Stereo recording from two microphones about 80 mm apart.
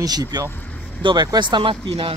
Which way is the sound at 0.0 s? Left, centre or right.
Right.